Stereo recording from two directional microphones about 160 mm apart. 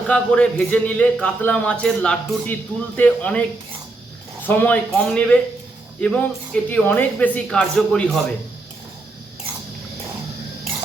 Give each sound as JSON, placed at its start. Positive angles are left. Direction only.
{"t": 0.1, "sound": "a man's voice", "side_deg": 10}
{"t": 4.4, "sound": "a man's voice", "side_deg": 10}